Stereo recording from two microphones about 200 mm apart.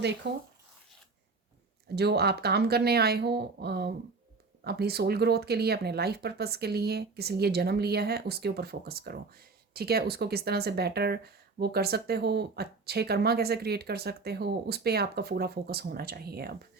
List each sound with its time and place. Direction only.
0.2 s speech: 60° right (ahead or behind)
2.0 s speech: 55° right (ahead or behind)